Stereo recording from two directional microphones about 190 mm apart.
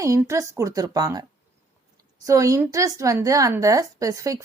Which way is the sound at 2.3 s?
15° right (ahead or behind).